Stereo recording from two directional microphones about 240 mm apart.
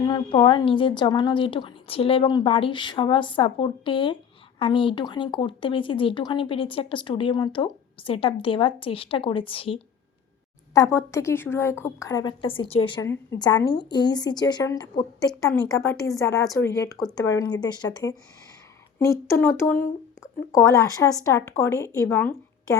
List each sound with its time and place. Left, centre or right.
0.0 s a woman's voice: centre